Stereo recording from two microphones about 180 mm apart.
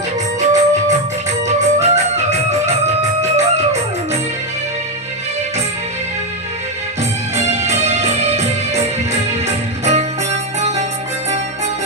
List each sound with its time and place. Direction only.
0.3 s music: 40° right (ahead or behind)
7.4 s music: 40° right (ahead or behind)
9.8 s music: 40° right (ahead or behind)